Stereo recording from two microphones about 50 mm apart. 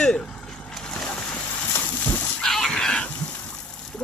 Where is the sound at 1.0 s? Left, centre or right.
Left.